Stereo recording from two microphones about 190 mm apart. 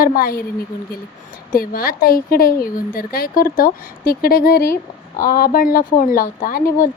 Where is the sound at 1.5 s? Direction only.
50° left (ahead or behind).